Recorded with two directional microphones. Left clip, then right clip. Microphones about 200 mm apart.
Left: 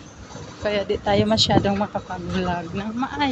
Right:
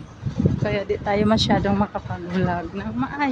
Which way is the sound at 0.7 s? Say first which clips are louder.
Left 4 dB; 10° right (ahead or behind).